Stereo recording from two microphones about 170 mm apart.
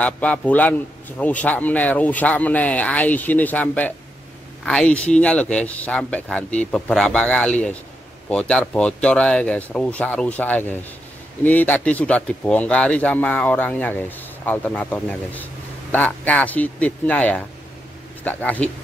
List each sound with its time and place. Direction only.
0.0 s speech: 10° left (ahead or behind)